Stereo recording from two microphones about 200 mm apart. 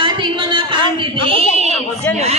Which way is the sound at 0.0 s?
25° right (ahead or behind).